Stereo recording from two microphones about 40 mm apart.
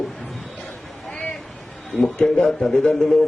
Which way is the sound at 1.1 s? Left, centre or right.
Left.